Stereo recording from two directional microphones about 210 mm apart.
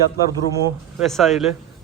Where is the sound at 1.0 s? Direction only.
Centre (ahead or behind).